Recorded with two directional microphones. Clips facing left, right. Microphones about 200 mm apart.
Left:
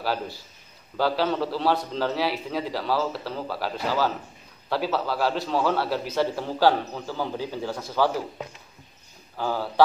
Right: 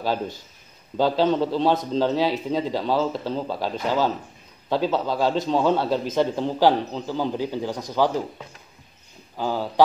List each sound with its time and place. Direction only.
0.0 s a man's voice: 20° right (ahead or behind)
9.4 s speech: 15° right (ahead or behind)